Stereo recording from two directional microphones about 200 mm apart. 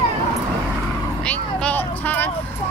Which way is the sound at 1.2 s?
5° left (ahead or behind).